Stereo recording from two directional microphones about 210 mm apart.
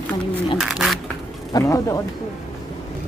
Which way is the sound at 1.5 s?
15° left (ahead or behind).